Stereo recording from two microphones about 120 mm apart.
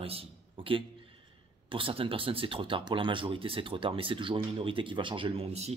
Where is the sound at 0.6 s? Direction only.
45° right (ahead or behind).